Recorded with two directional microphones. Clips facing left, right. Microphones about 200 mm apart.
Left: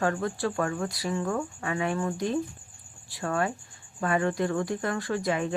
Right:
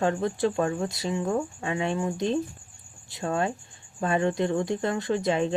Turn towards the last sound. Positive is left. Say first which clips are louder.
# right 3 dB
turn(degrees=-25)  # may be behind; listen again after turning